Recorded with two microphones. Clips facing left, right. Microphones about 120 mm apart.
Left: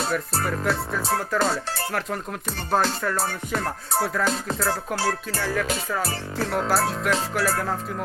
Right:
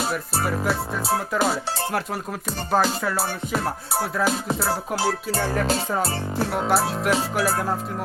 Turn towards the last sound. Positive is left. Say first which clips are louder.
# right 2 dB
turn(degrees=-15)  # may be behind; listen again after turning